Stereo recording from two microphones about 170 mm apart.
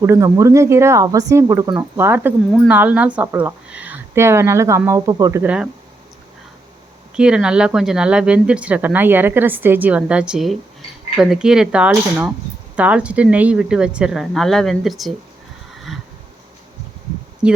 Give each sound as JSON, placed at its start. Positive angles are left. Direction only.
{"t": 0.0, "sound": "speech", "side_deg": -15}
{"t": 7.2, "sound": "speech", "side_deg": -5}
{"t": 15.7, "sound": "a sound", "side_deg": 0}
{"t": 17.4, "sound": "speech", "side_deg": -5}